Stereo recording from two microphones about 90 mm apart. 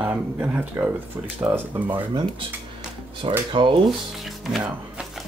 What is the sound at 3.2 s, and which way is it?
Speech, 80° right.